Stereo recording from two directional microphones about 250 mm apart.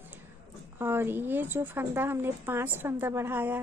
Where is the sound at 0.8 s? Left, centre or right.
Centre.